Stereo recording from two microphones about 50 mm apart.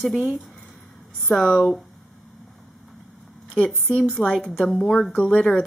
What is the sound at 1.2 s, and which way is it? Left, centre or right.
Speech, centre.